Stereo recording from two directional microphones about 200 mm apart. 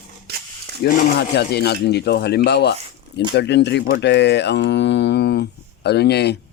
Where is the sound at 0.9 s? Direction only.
40° left (ahead or behind).